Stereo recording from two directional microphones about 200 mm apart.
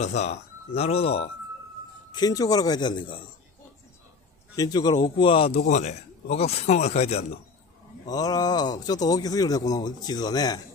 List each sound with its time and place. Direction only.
0.0 s a man's voice: 35° left (ahead or behind)
2.1 s a man's voice: 20° left (ahead or behind)
4.6 s a man's voice: 20° left (ahead or behind)
8.1 s a man's voice: 20° left (ahead or behind)